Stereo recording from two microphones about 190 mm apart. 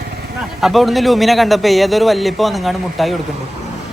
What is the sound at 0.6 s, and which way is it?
A man's voice, centre (ahead or behind).